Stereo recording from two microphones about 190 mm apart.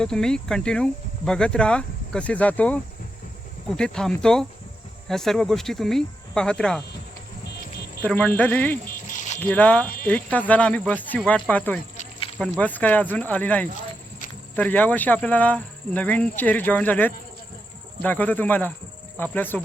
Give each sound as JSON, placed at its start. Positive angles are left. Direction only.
{"t": 0.0, "sound": "speech", "side_deg": 5}
{"t": 7.6, "sound": "cricket", "side_deg": 50}
{"t": 8.0, "sound": "speech", "side_deg": 10}
{"t": 9.0, "sound": "a sound", "side_deg": 40}
{"t": 9.4, "sound": "speech", "side_deg": 10}